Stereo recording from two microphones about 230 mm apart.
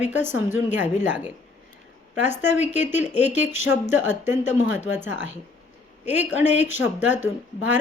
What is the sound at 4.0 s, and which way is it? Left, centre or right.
A woman's voice, centre.